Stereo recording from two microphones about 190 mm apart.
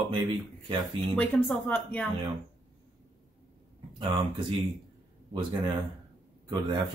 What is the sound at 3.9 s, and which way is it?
Speech, 25° right (ahead or behind).